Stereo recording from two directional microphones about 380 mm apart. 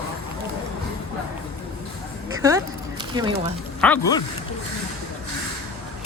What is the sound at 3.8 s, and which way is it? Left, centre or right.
Speech, centre.